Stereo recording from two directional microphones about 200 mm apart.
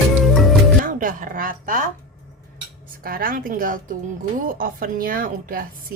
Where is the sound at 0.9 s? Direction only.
40° right (ahead or behind).